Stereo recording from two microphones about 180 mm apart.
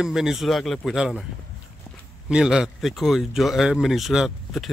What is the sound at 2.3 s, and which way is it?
Speech, 5° right (ahead or behind).